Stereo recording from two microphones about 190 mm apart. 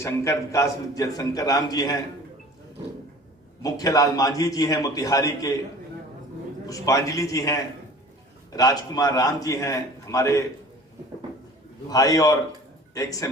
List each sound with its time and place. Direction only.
0.0 s a man's voice: 15° left (ahead or behind)
3.6 s a man's voice: 20° left (ahead or behind)
6.7 s a man's voice: 15° left (ahead or behind)
11.9 s a man's voice: 20° left (ahead or behind)